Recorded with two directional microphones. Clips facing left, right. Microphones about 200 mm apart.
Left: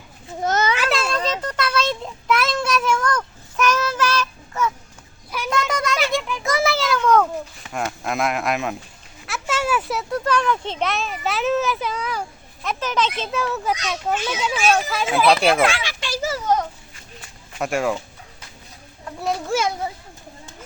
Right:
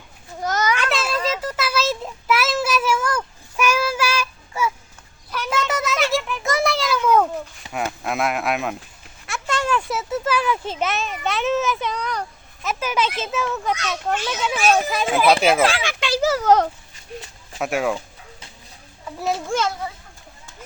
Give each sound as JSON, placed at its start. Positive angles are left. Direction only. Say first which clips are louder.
{"t": 0.4, "sound": "children playing", "louder": "left 1 dB", "side_deg": 25}
{"t": 0.8, "sound": "a sound", "louder": "left 1 dB", "side_deg": 0}
{"t": 12.6, "sound": "speech", "louder": "even", "side_deg": -10}
{"t": 15.8, "sound": "a sound", "louder": "right 5 dB", "side_deg": -65}
{"t": 17.6, "sound": "speech", "louder": "even", "side_deg": 0}
{"t": 19.0, "sound": "a child's voice", "louder": "even", "side_deg": 0}